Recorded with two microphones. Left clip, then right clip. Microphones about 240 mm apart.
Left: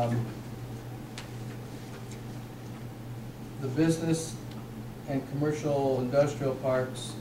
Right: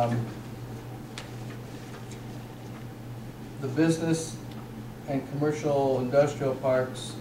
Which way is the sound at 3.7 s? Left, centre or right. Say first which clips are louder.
Right 2 dB; centre.